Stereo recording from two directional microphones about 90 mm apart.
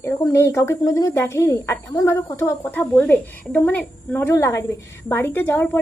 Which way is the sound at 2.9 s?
20° left (ahead or behind).